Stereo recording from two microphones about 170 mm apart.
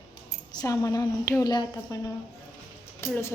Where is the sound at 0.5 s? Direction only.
20° left (ahead or behind).